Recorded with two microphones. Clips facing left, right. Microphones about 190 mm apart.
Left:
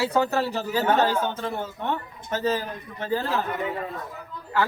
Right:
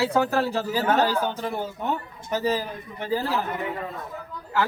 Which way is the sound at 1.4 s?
10° right (ahead or behind).